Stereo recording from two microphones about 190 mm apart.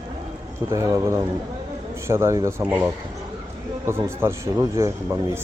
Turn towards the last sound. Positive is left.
turn(degrees=-15)  # may be behind; listen again after turning